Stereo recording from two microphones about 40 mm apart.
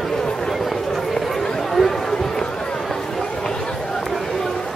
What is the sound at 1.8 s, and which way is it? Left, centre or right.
Run, centre.